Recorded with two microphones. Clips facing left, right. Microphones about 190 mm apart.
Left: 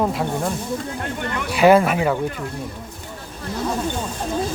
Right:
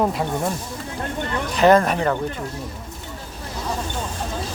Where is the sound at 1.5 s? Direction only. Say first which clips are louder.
Left 1 dB; 10° left (ahead or behind).